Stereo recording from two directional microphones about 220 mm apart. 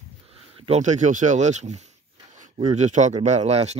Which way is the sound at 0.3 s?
25° right (ahead or behind).